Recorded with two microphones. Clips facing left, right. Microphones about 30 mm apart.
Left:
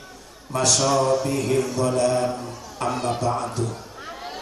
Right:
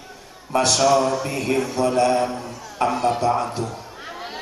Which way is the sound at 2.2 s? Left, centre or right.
Centre.